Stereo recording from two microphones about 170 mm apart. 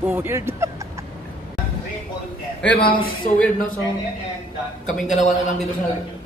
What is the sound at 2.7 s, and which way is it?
Speech, 65° left (ahead or behind).